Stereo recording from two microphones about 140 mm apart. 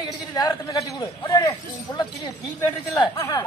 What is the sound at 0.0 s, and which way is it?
A man's voice, 30° left (ahead or behind).